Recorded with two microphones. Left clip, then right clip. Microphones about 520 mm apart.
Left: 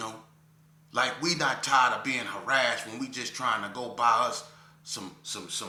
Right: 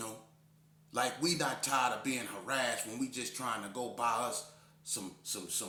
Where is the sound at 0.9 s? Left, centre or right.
Right.